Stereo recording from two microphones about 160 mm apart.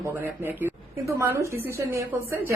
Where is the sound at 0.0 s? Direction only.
15° right (ahead or behind).